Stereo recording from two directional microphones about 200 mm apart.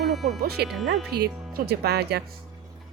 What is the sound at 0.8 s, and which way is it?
Speech, 60° right (ahead or behind).